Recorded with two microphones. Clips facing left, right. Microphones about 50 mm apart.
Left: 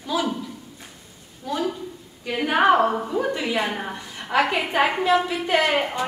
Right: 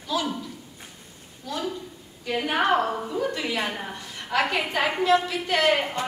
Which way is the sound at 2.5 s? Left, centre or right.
Left.